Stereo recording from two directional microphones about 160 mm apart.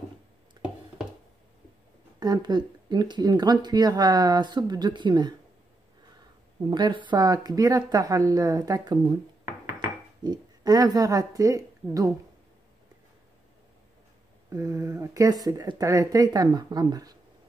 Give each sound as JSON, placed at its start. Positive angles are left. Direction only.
{"t": 0.6, "sound": "a sound", "side_deg": -25}
{"t": 2.1, "sound": "speech", "side_deg": -25}
{"t": 6.7, "sound": "speech", "side_deg": -30}
{"t": 9.4, "sound": "dishes", "side_deg": -15}
{"t": 10.2, "sound": "a woman's voice", "side_deg": -25}
{"t": 14.5, "sound": "speech", "side_deg": -20}